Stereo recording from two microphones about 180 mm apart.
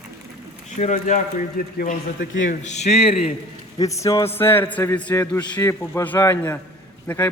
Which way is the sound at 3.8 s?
20° left (ahead or behind).